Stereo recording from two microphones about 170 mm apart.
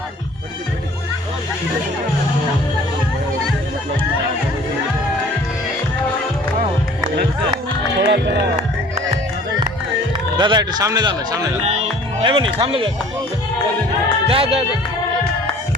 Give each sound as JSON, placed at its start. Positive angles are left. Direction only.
{"t": 7.9, "sound": "music", "side_deg": -75}
{"t": 10.3, "sound": "speech", "side_deg": -25}
{"t": 11.6, "sound": "speech", "side_deg": -35}
{"t": 14.3, "sound": "speech", "side_deg": -35}